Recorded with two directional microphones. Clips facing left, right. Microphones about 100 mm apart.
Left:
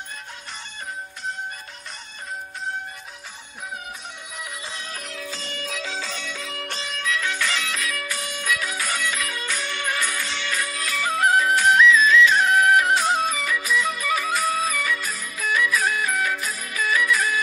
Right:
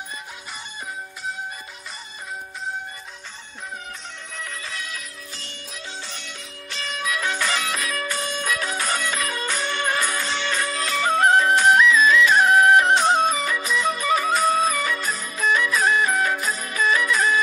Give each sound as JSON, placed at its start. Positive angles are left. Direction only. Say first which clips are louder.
{"t": 4.4, "sound": "music", "louder": "right 2 dB", "side_deg": 15}
{"t": 5.0, "sound": "music", "louder": "left 6 dB", "side_deg": 90}
{"t": 7.0, "sound": "music", "louder": "right 1 dB", "side_deg": -20}
{"t": 7.7, "sound": "music", "louder": "right 2 dB", "side_deg": -35}
{"t": 8.4, "sound": "music", "louder": "left 2 dB", "side_deg": -45}
{"t": 10.4, "sound": "music", "louder": "right 3 dB", "side_deg": -35}
{"t": 12.0, "sound": "music", "louder": "even", "side_deg": -50}
{"t": 12.4, "sound": "music", "louder": "right 3 dB", "side_deg": -20}